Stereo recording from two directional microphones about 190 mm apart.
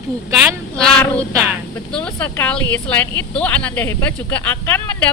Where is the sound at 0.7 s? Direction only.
10° left (ahead or behind).